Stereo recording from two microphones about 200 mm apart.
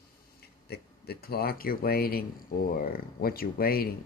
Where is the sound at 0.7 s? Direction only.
50° left (ahead or behind).